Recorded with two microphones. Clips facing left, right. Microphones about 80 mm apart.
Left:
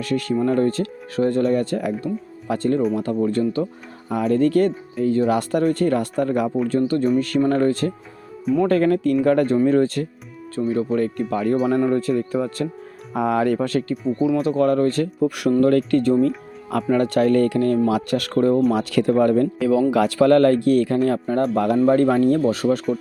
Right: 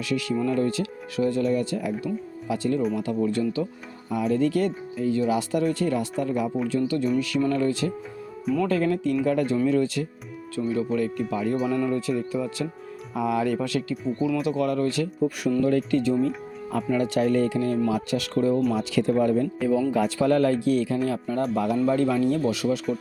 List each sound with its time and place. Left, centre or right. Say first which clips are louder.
0.0 s speech: left 4 dB; left
6.7 s speech: left 5 dB; left
10.6 s speech: left 5 dB; left
10.9 s speech: left 4 dB; left
13.9 s speech: left 5 dB; centre
14.3 s speech: left 6 dB; left
15.2 s speech: left 6 dB; left